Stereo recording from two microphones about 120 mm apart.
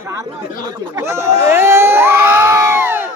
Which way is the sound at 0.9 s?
25° right (ahead or behind).